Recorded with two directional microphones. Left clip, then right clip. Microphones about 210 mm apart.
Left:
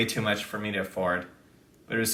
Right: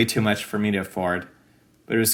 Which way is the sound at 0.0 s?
50° right (ahead or behind).